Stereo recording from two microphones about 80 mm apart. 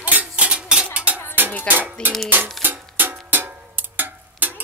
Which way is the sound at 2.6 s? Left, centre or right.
Right.